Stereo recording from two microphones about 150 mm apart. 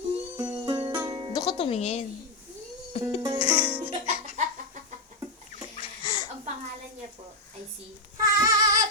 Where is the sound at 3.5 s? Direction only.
10° right (ahead or behind).